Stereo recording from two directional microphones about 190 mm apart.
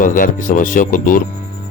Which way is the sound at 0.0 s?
45° left (ahead or behind).